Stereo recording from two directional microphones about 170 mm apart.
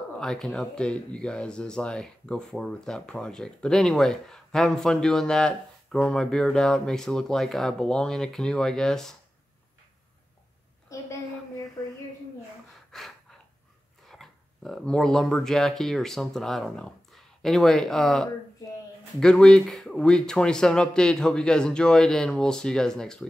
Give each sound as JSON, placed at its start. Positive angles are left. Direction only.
{"t": 0.2, "sound": "speech", "side_deg": 5}
{"t": 10.9, "sound": "a sound", "side_deg": 20}
{"t": 12.9, "sound": "gasp", "side_deg": 0}
{"t": 14.0, "sound": "speech", "side_deg": 0}